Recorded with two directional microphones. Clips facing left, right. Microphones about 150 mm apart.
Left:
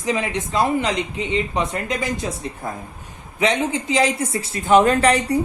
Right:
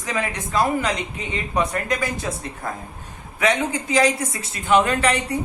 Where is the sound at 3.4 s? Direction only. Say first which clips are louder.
Left 1 dB; 25° left (ahead or behind).